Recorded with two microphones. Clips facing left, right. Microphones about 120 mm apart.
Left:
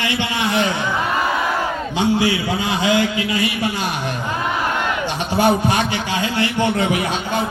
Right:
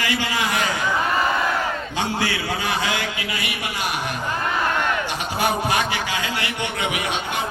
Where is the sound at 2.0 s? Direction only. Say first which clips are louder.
Left 8 dB; 15° left (ahead or behind).